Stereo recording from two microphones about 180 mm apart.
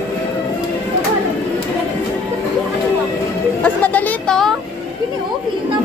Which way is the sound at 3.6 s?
10° left (ahead or behind).